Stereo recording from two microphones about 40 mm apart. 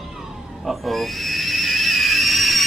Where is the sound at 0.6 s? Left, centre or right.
Centre.